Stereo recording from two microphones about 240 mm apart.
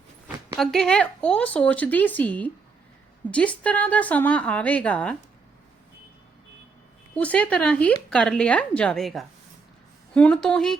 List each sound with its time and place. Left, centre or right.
0.5 s speech: centre
7.2 s speech: centre